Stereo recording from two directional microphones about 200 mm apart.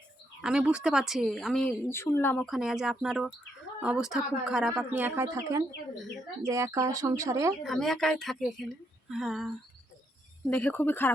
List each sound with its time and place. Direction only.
0.4 s a woman's voice: 5° right (ahead or behind)
1.9 s speech: 10° left (ahead or behind)
2.5 s a woman's voice: centre (ahead or behind)
7.6 s a woman's voice: centre (ahead or behind)
10.5 s speech: 10° left (ahead or behind)